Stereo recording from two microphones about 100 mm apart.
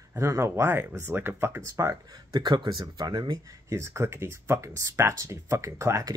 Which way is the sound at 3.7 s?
30° right (ahead or behind).